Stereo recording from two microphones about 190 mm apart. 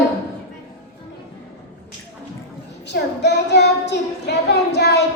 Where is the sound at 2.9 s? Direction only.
65° left (ahead or behind).